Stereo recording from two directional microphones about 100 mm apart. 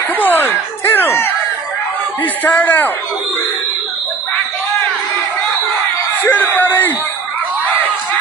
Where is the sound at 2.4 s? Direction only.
20° left (ahead or behind).